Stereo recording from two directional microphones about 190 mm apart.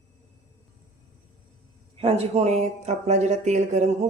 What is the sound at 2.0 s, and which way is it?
Speech, 35° right (ahead or behind).